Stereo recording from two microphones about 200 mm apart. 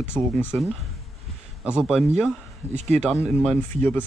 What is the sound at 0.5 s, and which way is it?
Speech, 5° right (ahead or behind).